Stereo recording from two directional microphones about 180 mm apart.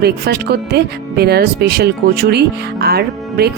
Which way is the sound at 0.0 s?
60° right (ahead or behind).